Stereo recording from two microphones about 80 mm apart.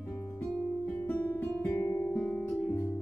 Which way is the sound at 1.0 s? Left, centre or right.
Left.